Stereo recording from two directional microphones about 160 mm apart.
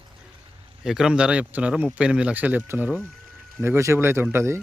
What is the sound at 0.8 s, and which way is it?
Speech, 5° right (ahead or behind).